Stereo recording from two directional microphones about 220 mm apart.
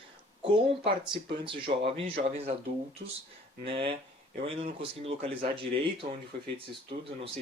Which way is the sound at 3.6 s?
25° right (ahead or behind).